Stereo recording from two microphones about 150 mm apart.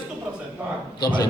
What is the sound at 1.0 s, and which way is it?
Speech, 30° left (ahead or behind).